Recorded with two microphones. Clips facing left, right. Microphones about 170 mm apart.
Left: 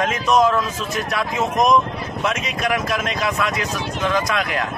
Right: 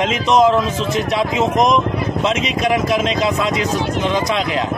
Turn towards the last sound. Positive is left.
turn(degrees=-20)  # may be behind; listen again after turning